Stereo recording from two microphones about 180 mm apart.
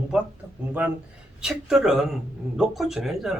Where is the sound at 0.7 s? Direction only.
10° right (ahead or behind).